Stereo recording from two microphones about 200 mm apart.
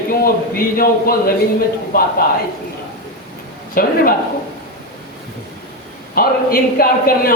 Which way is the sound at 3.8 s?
45° left (ahead or behind).